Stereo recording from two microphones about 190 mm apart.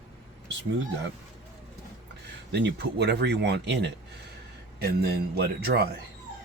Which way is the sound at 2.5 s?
60° right (ahead or behind).